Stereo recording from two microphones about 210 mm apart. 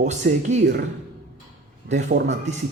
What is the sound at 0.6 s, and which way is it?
Speech, 50° right (ahead or behind).